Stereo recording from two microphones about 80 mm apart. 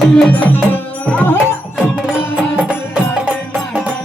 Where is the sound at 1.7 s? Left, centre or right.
Centre.